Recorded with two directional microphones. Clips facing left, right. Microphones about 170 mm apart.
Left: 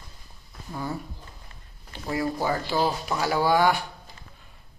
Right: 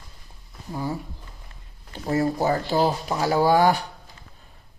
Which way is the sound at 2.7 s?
25° right (ahead or behind).